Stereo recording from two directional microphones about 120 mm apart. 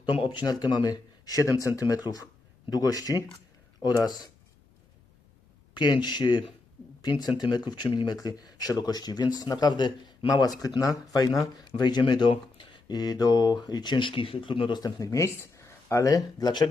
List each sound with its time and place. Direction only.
0.0 s speech: 40° left (ahead or behind)
5.7 s speech: 40° left (ahead or behind)